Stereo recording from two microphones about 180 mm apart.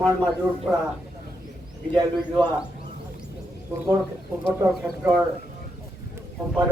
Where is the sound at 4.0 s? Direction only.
10° right (ahead or behind).